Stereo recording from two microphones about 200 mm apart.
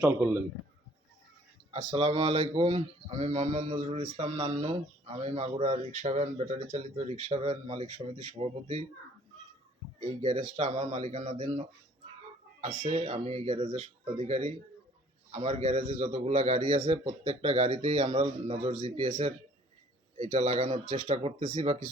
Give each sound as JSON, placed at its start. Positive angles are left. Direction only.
{"t": 0.2, "sound": "a man's voice", "side_deg": -10}
{"t": 1.7, "sound": "speech", "side_deg": -30}
{"t": 10.0, "sound": "speech", "side_deg": -30}
{"t": 12.9, "sound": "speech", "side_deg": -30}
{"t": 16.8, "sound": "speech", "side_deg": -20}
{"t": 17.1, "sound": "speech", "side_deg": -35}